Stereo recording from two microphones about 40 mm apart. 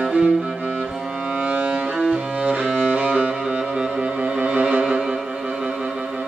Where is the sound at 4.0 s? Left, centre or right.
Right.